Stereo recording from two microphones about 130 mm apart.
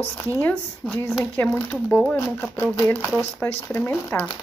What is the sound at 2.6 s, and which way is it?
Speech, 20° left (ahead or behind).